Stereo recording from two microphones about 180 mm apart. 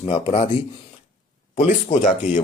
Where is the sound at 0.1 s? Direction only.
35° left (ahead or behind).